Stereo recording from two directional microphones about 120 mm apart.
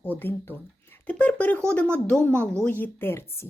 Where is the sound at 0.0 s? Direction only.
15° left (ahead or behind).